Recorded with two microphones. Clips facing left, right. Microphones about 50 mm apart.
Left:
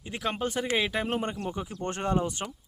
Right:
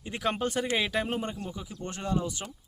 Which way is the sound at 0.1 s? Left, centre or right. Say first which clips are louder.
Right 1 dB; centre.